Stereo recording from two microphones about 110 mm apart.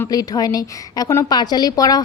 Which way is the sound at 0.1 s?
35° left (ahead or behind).